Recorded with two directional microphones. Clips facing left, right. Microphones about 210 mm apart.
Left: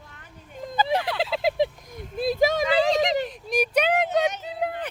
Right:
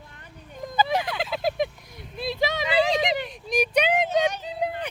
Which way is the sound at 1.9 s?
50° left (ahead or behind).